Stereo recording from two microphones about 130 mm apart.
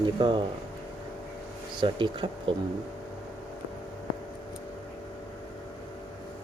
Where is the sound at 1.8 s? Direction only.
40° right (ahead or behind).